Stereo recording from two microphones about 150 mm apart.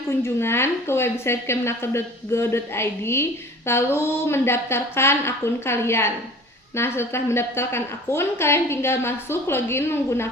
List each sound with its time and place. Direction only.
0.1 s a woman's voice: 15° left (ahead or behind)